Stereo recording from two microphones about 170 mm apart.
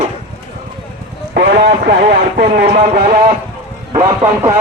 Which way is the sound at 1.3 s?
70° right (ahead or behind).